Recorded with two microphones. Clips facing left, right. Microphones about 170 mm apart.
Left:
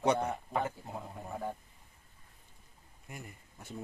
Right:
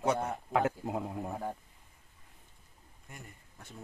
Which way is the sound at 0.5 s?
85° right.